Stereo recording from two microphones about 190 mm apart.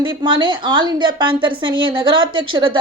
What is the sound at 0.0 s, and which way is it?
A woman's voice, 25° right (ahead or behind).